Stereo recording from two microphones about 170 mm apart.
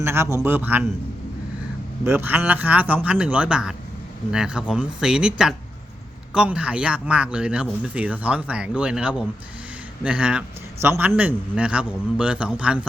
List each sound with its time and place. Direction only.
0.0 s speech: 15° right (ahead or behind)
2.0 s speech: 10° right (ahead or behind)